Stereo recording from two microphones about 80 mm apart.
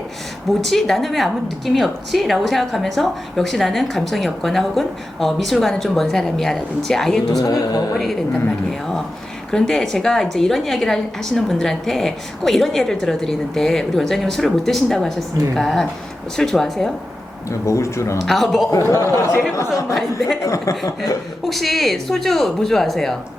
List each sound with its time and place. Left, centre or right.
0.6 s a woman's voice: centre
7.3 s speech: left
9.5 s a woman's voice: centre
17.5 s speech: left
18.3 s a woman's voice: centre
18.9 s speech: left
19.9 s a woman's voice: centre
20.5 s speech: left
21.4 s a woman's voice: centre